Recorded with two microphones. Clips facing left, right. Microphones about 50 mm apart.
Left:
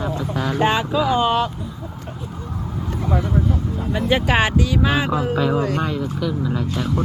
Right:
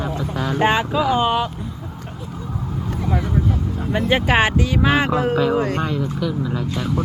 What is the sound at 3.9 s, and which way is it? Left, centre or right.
Speech, right.